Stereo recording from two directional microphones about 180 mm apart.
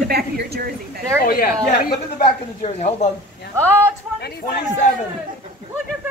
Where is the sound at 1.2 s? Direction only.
55° left (ahead or behind).